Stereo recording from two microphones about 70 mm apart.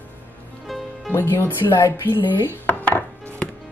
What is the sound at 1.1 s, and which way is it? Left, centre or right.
Speech, left.